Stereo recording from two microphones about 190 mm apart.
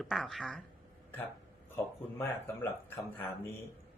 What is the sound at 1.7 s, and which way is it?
Speech, 10° left (ahead or behind).